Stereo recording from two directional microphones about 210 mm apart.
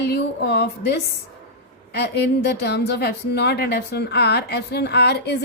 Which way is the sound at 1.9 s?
50° left (ahead or behind).